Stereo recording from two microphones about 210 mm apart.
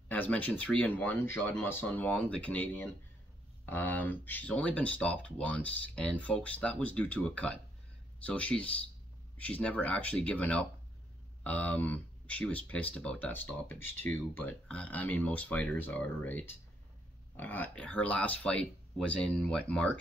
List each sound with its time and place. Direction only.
0.1 s speech: 5° left (ahead or behind)